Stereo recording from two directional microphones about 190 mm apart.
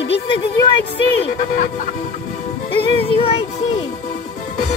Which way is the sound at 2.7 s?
30° left (ahead or behind).